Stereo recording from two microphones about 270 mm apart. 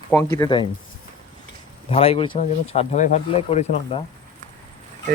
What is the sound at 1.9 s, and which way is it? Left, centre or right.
Speech, left.